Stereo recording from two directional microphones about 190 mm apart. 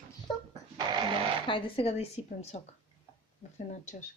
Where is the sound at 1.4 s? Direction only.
25° left (ahead or behind).